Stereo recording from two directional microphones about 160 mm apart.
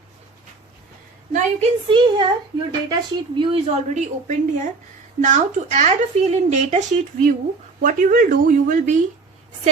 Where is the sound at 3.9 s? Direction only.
50° right (ahead or behind).